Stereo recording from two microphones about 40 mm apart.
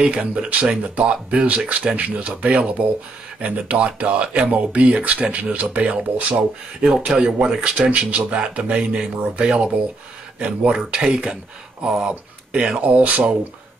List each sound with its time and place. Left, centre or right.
0.0 s speech: right
6.8 s speech: centre
10.4 s speech: right
10.9 s speech: right